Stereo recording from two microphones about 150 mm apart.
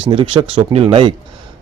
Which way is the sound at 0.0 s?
30° right (ahead or behind).